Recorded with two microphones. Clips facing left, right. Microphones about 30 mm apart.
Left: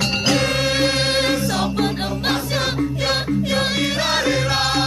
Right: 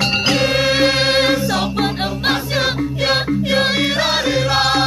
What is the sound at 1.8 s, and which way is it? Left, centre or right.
Music, centre.